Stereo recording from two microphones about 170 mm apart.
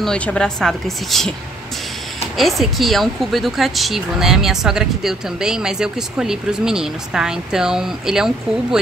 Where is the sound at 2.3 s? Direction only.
Centre (ahead or behind).